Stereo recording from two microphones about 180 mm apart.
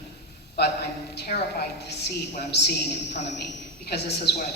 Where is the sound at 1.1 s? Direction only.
65° left (ahead or behind).